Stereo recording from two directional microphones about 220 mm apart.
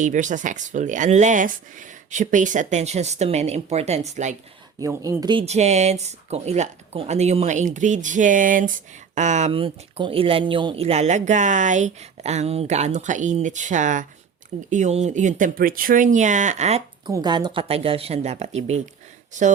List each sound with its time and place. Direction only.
0.0 s speech: 35° right (ahead or behind)
4.8 s speech: 15° right (ahead or behind); by 16.8 s 30° right (ahead or behind)
17.1 s speech: 20° right (ahead or behind); by 19.5 s 35° right (ahead or behind)